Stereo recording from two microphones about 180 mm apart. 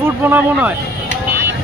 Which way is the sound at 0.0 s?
10° right (ahead or behind).